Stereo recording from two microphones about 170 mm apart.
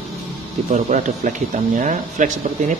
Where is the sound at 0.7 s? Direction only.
45° right (ahead or behind).